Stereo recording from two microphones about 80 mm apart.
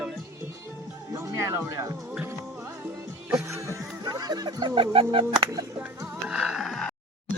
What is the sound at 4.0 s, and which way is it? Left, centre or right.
Speech, right.